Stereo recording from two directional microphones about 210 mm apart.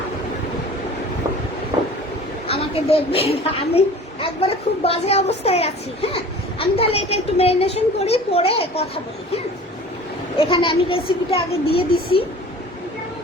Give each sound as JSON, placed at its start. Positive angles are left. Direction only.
{"t": 2.5, "sound": "speech", "side_deg": 25}
{"t": 10.3, "sound": "speech", "side_deg": 25}